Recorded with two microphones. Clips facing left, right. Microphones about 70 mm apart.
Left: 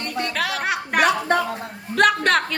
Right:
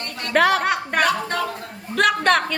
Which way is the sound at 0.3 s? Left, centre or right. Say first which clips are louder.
Right 12 dB; right.